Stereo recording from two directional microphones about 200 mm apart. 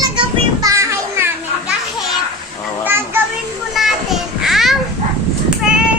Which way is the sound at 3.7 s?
Centre (ahead or behind).